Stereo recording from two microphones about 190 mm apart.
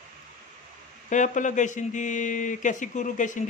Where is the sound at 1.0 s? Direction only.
40° left (ahead or behind).